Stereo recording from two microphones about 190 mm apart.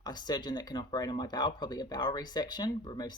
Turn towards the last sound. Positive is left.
turn(degrees=20)  # may be behind; listen again after turning